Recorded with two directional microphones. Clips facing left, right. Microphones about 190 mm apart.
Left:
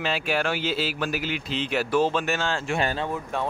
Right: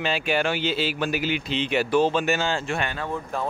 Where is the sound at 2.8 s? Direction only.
30° left (ahead or behind).